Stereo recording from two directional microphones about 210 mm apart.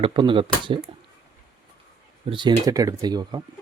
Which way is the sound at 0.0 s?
25° right (ahead or behind).